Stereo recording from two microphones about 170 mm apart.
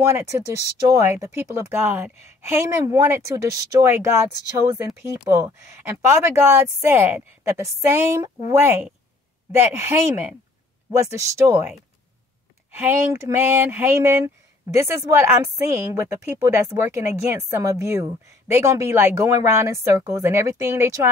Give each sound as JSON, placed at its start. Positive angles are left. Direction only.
{"t": 0.0, "sound": "speech", "side_deg": -15}
{"t": 12.7, "sound": "speech", "side_deg": -15}